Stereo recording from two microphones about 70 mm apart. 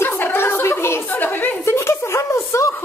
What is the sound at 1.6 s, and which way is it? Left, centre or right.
Speech, left.